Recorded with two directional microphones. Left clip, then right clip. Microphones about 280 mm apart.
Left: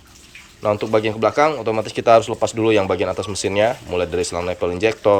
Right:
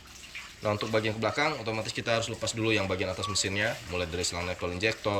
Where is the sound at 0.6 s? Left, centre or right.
Centre.